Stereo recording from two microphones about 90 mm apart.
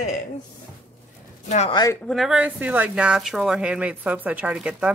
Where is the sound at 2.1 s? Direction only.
Centre (ahead or behind).